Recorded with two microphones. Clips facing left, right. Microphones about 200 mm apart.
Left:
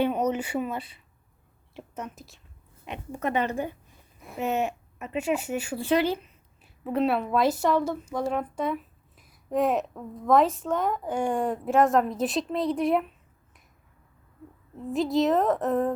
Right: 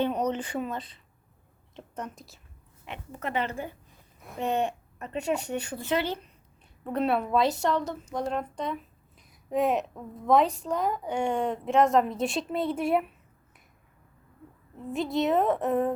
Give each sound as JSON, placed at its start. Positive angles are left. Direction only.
{"t": 0.0, "sound": "speech", "side_deg": 10}
{"t": 2.8, "sound": "a woman's voice", "side_deg": 15}
{"t": 4.2, "sound": "a woman's voice", "side_deg": 5}
{"t": 6.8, "sound": "speech", "side_deg": 0}
{"t": 14.9, "sound": "speech", "side_deg": 0}